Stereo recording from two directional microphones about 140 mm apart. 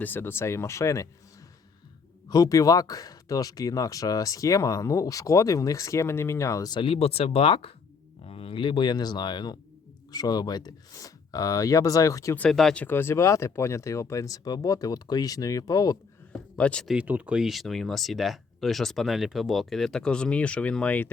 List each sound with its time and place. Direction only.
0.0 s speech: 15° left (ahead or behind)
2.3 s speech: 25° left (ahead or behind)
12.4 s speech: 5° left (ahead or behind); by 16.0 s 25° left (ahead or behind)
16.6 s speech: 5° left (ahead or behind)
16.9 s speech: 10° right (ahead or behind); by 21.1 s 10° left (ahead or behind)